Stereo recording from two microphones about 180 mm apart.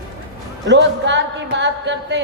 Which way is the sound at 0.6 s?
80° right.